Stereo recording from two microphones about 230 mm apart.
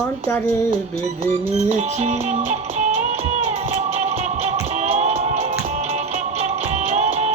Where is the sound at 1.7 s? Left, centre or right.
Right.